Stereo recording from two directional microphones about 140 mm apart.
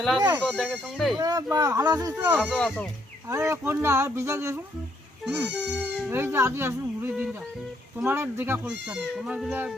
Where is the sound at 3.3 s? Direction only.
20° right (ahead or behind).